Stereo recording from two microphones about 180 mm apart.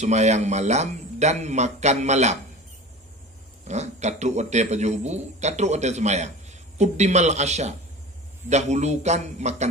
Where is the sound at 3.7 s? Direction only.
40° right (ahead or behind).